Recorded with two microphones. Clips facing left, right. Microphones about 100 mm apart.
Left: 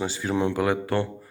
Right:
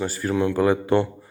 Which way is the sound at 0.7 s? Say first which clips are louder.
Right 5 dB; 15° right (ahead or behind).